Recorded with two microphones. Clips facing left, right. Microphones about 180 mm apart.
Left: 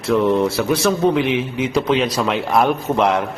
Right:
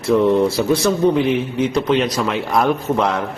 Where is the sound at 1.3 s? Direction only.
90° left.